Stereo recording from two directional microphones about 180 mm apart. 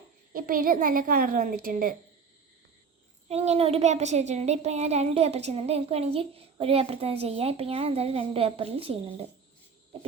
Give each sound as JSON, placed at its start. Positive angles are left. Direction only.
{"t": 0.3, "sound": "a child's voice", "side_deg": -50}
{"t": 3.2, "sound": "speech", "side_deg": -35}